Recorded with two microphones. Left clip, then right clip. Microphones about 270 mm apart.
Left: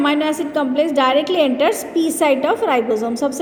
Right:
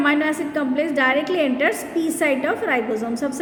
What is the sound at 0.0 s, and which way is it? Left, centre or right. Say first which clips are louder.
A woman's voice: left 2 dB; centre.